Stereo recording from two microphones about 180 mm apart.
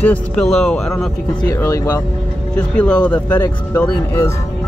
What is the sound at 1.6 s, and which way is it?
Speech, 15° left (ahead or behind).